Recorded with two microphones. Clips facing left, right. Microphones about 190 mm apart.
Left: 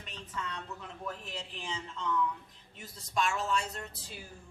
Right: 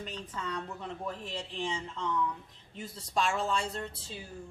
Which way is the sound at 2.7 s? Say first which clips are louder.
Right 1 dB; 30° right (ahead or behind).